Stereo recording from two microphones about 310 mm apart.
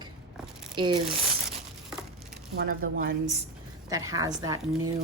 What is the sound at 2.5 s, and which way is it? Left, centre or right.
Speech, right.